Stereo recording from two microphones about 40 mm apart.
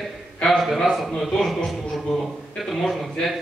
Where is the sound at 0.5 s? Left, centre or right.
Centre.